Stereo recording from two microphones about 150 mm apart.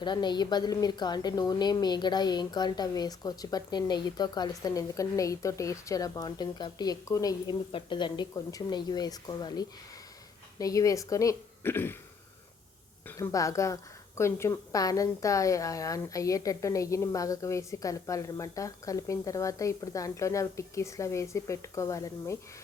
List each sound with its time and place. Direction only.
0.0 s a woman's voice: 30° left (ahead or behind)
7.7 s a woman's voice: 35° left (ahead or behind); by 11.9 s 15° left (ahead or behind)
13.1 s a woman's voice: 20° left (ahead or behind)